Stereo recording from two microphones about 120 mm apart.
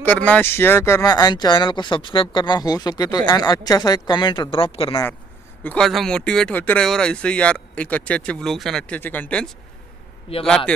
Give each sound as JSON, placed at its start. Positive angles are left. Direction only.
{"t": 0.0, "sound": "speech", "side_deg": 10}
{"t": 1.1, "sound": "speech", "side_deg": 35}
{"t": 5.6, "sound": "speech", "side_deg": 15}
{"t": 10.3, "sound": "a man's voice", "side_deg": 50}